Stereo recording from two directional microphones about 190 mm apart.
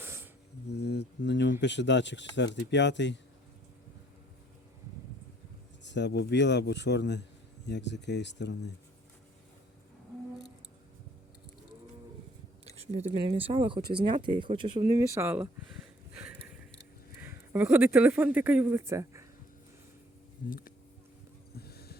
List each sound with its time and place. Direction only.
0.0 s a sound: 10° right (ahead or behind)
0.7 s mantra: 65° left (ahead or behind)
1.6 s speech: 65° left (ahead or behind)
5.8 s a man's voice: 65° left (ahead or behind)
12.8 s speech: 35° right (ahead or behind); by 15.4 s 10° right (ahead or behind)
16.1 s a sound: 10° right (ahead or behind)
17.2 s speech: 10° right (ahead or behind)
20.5 s speech: 50° left (ahead or behind)
21.5 s a sound: 55° left (ahead or behind)